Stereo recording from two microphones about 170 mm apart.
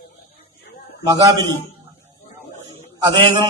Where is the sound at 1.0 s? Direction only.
20° right (ahead or behind).